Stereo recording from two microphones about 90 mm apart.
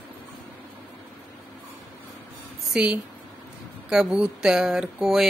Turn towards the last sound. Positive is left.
turn(degrees=-5)  # may be behind; listen again after turning